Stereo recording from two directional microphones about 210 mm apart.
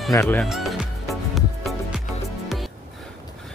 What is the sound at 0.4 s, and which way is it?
Music, centre (ahead or behind).